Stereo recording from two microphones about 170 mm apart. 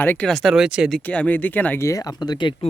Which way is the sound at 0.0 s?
10° left (ahead or behind).